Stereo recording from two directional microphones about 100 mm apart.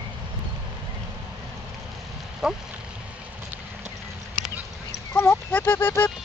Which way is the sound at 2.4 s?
5° right (ahead or behind).